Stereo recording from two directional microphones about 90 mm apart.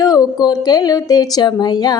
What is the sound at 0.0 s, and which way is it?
Speech, 45° left (ahead or behind).